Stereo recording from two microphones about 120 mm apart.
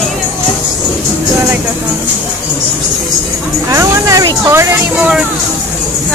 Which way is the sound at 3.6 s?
30° right (ahead or behind).